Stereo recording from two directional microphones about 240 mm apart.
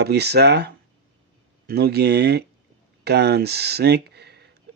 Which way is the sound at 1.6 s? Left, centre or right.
Right.